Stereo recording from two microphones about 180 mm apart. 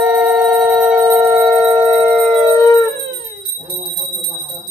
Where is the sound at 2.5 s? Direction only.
20° left (ahead or behind).